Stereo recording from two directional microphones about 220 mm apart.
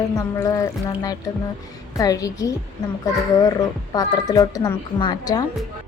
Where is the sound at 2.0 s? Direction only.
15° left (ahead or behind).